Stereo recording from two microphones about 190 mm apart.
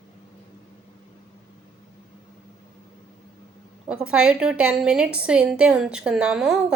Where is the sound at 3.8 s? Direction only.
5° right (ahead or behind).